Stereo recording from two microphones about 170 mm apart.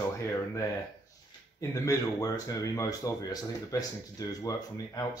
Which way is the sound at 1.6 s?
20° left (ahead or behind).